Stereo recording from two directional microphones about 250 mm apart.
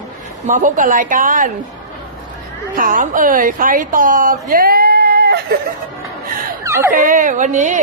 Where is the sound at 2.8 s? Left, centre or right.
Right.